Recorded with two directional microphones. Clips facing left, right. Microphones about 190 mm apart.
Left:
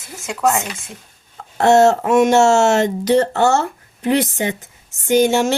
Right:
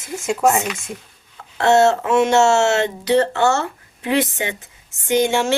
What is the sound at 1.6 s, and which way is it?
Speech, 40° left (ahead or behind).